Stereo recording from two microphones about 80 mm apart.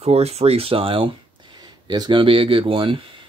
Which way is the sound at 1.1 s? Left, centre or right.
Right.